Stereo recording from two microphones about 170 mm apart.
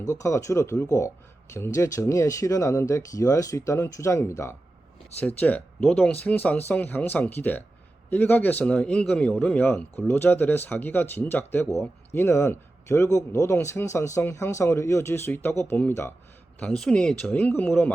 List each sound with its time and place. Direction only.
0.0 s speech: 20° left (ahead or behind)